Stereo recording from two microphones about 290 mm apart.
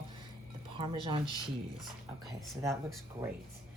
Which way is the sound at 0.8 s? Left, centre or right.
Centre.